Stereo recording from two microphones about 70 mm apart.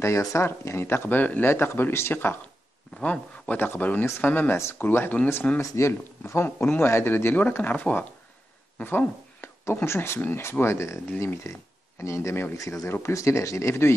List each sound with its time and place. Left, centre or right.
0.0 s speech: left
3.0 s speech: centre
5.6 s speech: left